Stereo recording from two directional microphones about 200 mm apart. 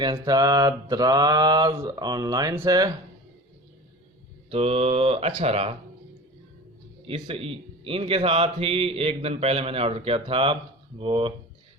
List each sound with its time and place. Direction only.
0.0 s a man's voice: 20° right (ahead or behind)
4.4 s a man's voice: 30° right (ahead or behind)
7.1 s a man's voice: 30° right (ahead or behind)